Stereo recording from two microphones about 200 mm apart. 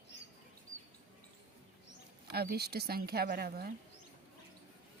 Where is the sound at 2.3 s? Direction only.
50° right (ahead or behind).